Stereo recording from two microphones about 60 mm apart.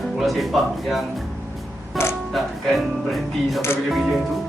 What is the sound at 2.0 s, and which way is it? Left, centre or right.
Music, left.